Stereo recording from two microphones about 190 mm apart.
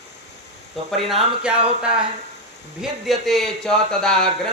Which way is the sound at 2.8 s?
Centre (ahead or behind).